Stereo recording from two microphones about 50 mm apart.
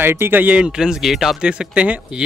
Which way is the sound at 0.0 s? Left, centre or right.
Right.